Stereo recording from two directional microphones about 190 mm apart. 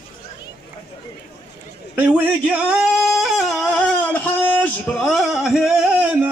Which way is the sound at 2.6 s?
5° right (ahead or behind).